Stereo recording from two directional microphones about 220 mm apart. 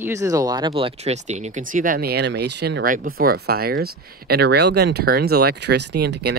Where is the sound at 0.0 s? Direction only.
15° right (ahead or behind).